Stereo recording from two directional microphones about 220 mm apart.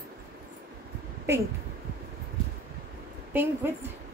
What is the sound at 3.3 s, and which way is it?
Speech, 10° right (ahead or behind).